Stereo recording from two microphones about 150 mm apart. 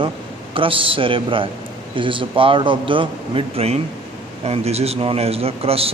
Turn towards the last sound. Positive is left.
turn(degrees=-40)  # may be behind; listen again after turning